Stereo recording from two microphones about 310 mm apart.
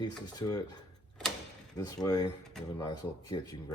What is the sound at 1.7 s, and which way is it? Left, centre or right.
Speech, centre.